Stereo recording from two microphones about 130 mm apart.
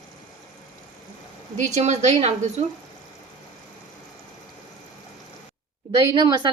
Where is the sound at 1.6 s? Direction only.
65° right (ahead or behind).